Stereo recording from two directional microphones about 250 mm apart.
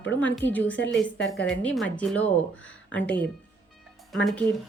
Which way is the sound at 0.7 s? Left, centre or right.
Left.